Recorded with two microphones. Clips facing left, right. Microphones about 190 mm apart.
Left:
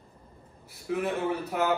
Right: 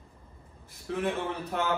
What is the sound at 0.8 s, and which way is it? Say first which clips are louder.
Speech: left 2 dB; 5° left (ahead or behind).